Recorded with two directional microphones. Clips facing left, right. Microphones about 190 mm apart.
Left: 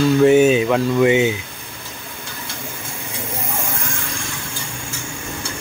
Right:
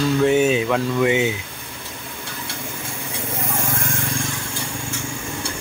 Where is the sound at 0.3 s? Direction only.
5° left (ahead or behind).